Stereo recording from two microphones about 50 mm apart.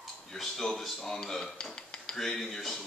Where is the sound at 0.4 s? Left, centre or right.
Centre.